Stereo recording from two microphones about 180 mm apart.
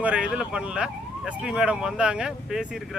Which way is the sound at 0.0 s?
5° right (ahead or behind).